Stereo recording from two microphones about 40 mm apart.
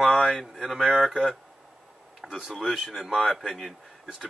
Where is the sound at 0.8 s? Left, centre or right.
Right.